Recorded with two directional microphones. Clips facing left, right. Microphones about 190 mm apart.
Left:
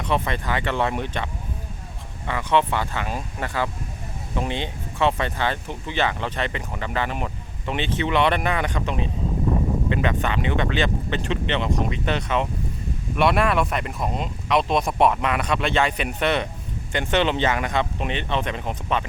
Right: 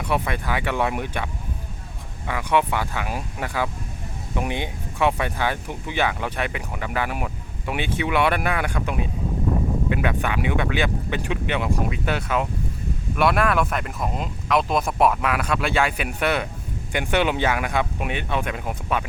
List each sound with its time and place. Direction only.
0.0 s speech: 10° right (ahead or behind)